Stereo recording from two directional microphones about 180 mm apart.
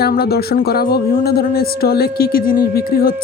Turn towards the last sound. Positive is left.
turn(degrees=55)  # may be behind; listen again after turning